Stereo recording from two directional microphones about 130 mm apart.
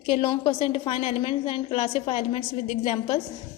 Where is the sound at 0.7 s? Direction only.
50° left (ahead or behind).